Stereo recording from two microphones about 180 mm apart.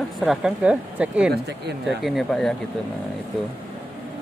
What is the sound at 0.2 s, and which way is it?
A woman's voice, 5° right (ahead or behind).